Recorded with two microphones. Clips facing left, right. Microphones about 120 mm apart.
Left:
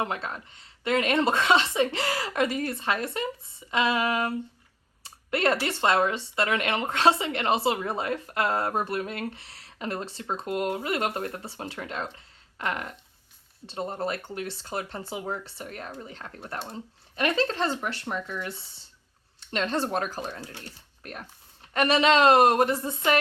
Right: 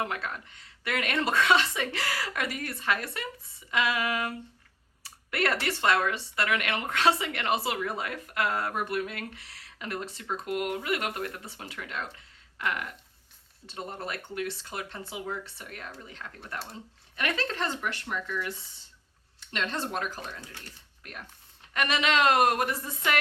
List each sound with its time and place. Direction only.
0.0 s speech: 25° left (ahead or behind)